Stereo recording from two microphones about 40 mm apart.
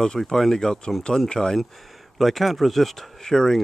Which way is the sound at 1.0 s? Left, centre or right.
Left.